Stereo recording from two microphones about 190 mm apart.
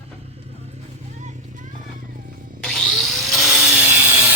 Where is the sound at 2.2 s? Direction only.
45° right (ahead or behind).